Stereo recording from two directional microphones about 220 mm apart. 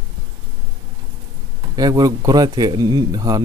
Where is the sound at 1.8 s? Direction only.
15° right (ahead or behind).